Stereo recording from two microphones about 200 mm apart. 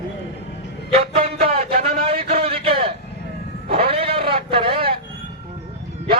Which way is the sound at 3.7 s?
30° right (ahead or behind).